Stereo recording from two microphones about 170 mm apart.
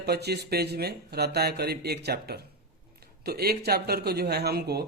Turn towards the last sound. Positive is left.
turn(degrees=-70)  # may be behind; listen again after turning